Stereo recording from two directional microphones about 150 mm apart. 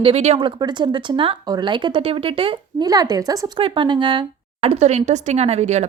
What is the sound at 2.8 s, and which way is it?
A woman's voice, 25° right (ahead or behind).